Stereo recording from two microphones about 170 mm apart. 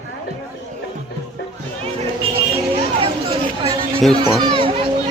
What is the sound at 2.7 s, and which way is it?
Chatter, 30° right (ahead or behind).